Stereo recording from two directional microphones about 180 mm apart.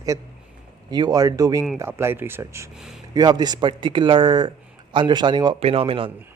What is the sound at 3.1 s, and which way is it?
Speech, 20° right (ahead or behind).